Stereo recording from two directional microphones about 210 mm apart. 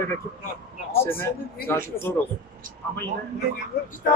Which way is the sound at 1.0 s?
10° left (ahead or behind).